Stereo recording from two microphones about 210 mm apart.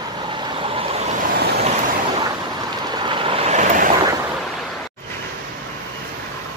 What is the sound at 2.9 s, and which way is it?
Vehicle, 20° right (ahead or behind).